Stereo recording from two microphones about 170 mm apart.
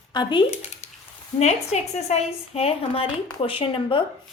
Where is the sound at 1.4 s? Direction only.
40° left (ahead or behind).